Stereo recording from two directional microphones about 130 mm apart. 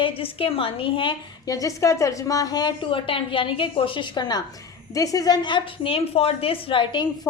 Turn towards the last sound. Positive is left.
turn(degrees=40)  # may be behind; listen again after turning